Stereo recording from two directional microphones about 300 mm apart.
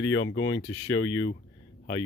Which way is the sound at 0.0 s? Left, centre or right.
Left.